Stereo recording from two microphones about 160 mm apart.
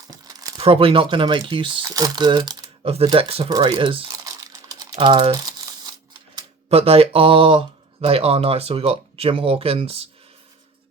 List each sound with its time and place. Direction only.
0.1 s crumpling: 25° right (ahead or behind)
0.6 s speech: 35° right (ahead or behind)
3.1 s crumpling: 35° right (ahead or behind)
4.9 s mechanisms: 30° right (ahead or behind)
6.7 s speech: 35° right (ahead or behind)